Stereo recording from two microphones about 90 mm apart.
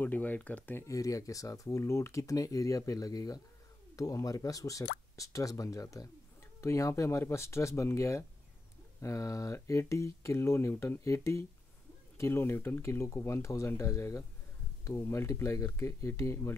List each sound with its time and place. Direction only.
0.0 s speech: 20° left (ahead or behind)
0.8 s speech: 40° left (ahead or behind)